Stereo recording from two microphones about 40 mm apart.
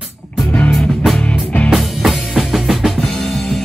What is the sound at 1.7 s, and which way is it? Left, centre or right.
Drum kit, centre.